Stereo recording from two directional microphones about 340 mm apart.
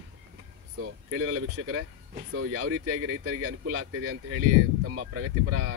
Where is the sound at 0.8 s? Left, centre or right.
Right.